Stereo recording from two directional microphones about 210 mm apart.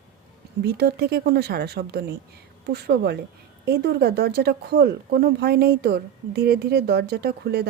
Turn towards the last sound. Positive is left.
turn(degrees=-50)  # may be behind; listen again after turning